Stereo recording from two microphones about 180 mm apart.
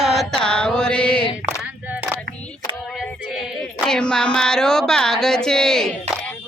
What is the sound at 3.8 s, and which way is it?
Speech, 5° left (ahead or behind).